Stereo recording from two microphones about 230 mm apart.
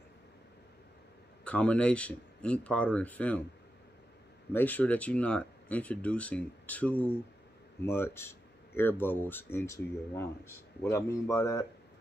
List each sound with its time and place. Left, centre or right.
1.4 s speech: centre
4.5 s speech: centre